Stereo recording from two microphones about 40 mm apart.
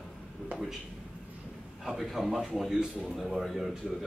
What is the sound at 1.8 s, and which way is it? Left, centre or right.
Speech, centre.